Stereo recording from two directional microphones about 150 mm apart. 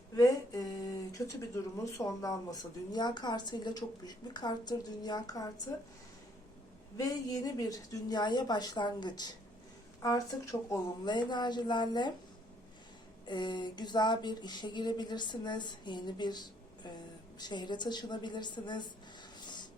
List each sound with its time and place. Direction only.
0.2 s speech: 25° left (ahead or behind)
6.9 s speech: 25° left (ahead or behind)
13.2 s speech: 30° left (ahead or behind)
19.4 s a sound: 30° left (ahead or behind)